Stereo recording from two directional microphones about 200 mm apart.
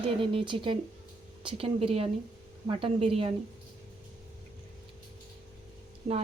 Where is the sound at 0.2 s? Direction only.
25° right (ahead or behind).